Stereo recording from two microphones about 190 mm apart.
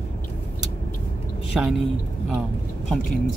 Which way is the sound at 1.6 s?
Centre (ahead or behind).